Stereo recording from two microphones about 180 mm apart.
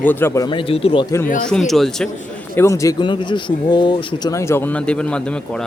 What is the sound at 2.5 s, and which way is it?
A man's voice, 15° left (ahead or behind).